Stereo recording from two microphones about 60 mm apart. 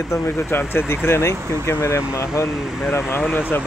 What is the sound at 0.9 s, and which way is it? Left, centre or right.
Speech, left.